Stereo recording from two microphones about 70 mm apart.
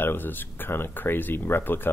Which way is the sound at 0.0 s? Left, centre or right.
Left.